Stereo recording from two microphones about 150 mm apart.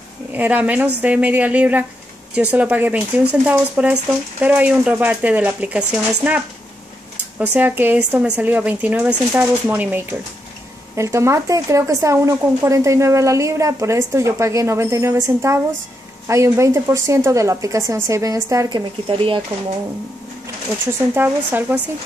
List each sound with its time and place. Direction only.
0.3 s speech: 10° right (ahead or behind)
19.0 s speech: 35° right (ahead or behind)
21.1 s speech: 15° right (ahead or behind)